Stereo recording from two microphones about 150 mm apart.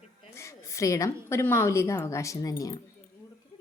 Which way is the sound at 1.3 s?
15° left (ahead or behind).